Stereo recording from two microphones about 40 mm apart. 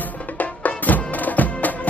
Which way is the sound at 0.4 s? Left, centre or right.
Left.